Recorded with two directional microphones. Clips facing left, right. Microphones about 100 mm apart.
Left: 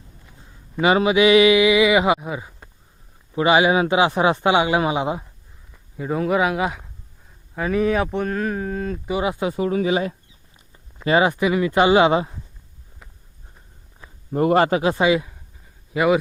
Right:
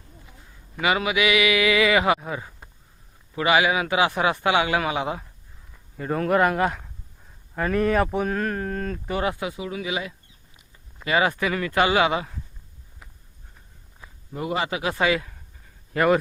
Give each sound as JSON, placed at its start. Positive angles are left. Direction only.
{"t": 0.3, "sound": "a man's voice", "side_deg": 30}
{"t": 3.3, "sound": "a man's voice", "side_deg": 25}
{"t": 6.0, "sound": "speech", "side_deg": 5}
{"t": 9.4, "sound": "speech", "side_deg": 40}
{"t": 11.0, "sound": "a man's voice", "side_deg": 25}
{"t": 14.3, "sound": "a man's voice", "side_deg": 50}
{"t": 14.8, "sound": "a man's voice", "side_deg": 25}
{"t": 15.9, "sound": "speech", "side_deg": 5}